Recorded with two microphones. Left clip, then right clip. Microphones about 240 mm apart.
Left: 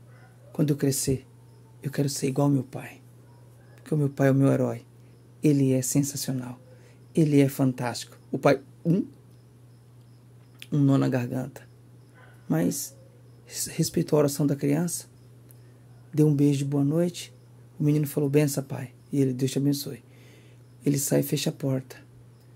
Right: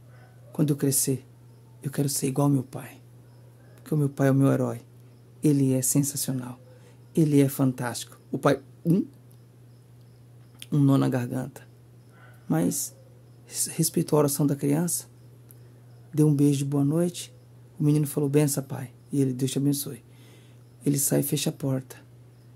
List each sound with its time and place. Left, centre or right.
0.5 s speech: centre
10.6 s speech: centre
16.2 s speech: centre